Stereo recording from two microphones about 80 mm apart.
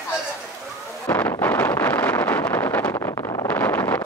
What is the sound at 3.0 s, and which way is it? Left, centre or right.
Vehicle, left.